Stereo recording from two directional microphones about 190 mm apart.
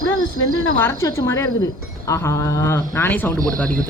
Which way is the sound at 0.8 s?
15° left (ahead or behind).